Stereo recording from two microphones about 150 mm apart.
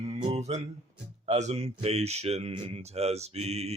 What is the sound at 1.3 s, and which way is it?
Speech, 50° right (ahead or behind).